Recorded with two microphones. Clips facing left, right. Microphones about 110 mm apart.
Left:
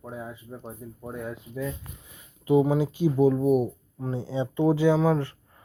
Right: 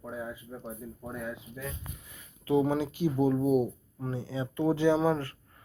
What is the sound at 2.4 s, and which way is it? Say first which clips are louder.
Speech: left 5 dB; 15° left (ahead or behind).